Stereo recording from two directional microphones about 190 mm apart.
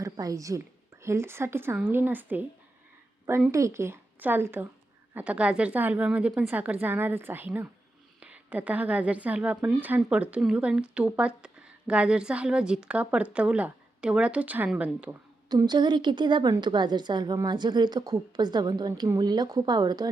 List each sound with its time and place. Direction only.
0.0 s a woman's voice: 15° right (ahead or behind)
15.4 s a woman's voice: 20° right (ahead or behind)